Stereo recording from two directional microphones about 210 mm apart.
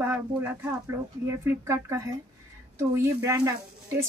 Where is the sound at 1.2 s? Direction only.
15° right (ahead or behind).